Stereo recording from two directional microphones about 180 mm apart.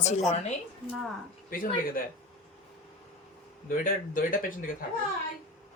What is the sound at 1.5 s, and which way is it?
Speech, 50° left (ahead or behind).